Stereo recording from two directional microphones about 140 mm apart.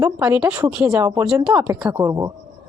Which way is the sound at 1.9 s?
20° right (ahead or behind).